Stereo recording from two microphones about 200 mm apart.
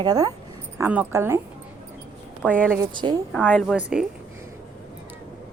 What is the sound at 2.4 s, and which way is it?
Speech, 5° left (ahead or behind).